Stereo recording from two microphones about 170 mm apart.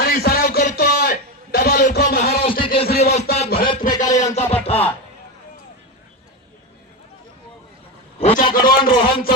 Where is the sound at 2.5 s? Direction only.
30° left (ahead or behind).